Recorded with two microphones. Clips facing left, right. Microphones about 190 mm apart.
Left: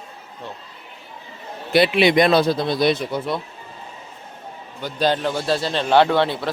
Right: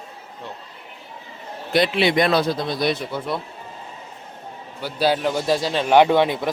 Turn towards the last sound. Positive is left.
turn(degrees=-15)  # may be behind; listen again after turning